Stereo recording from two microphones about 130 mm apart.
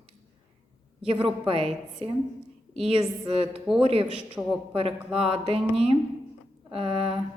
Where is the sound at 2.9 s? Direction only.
40° right (ahead or behind).